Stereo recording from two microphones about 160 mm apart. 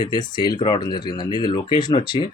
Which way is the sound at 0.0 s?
25° left (ahead or behind).